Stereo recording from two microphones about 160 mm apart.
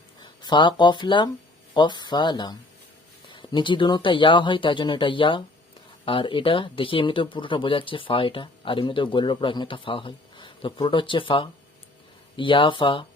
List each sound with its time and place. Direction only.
0.2 s speech: 30° left (ahead or behind)